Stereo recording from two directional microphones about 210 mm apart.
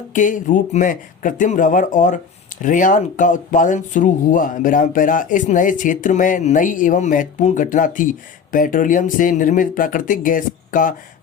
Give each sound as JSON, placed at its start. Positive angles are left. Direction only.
{"t": 0.1, "sound": "speech", "side_deg": 40}